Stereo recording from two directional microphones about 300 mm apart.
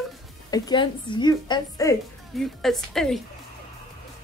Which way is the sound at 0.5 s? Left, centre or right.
Centre.